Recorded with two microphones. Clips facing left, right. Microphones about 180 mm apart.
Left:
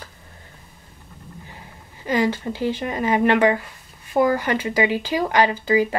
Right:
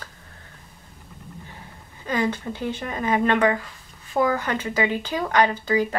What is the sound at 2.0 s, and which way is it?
Speech, 5° left (ahead or behind).